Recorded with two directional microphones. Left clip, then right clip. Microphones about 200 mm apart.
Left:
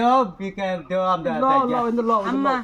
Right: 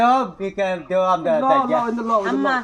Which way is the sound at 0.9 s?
40° left (ahead or behind).